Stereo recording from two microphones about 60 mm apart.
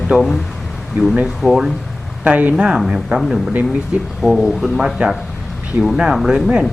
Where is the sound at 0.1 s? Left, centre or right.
Centre.